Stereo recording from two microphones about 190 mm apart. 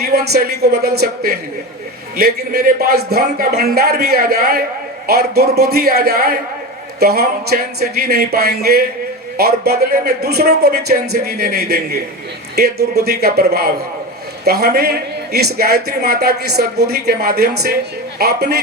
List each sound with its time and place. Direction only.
0.0 s a man's voice: 55° right (ahead or behind)